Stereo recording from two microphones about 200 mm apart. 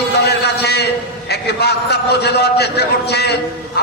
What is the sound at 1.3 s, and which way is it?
A man's voice, 55° left (ahead or behind).